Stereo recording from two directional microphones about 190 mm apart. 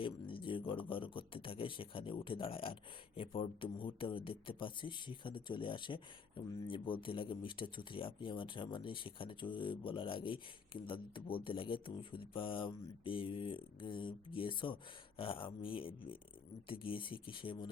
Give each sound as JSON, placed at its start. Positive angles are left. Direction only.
{"t": 0.0, "sound": "speech", "side_deg": 25}